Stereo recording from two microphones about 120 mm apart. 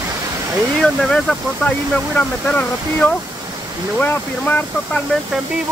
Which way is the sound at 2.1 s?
10° left (ahead or behind).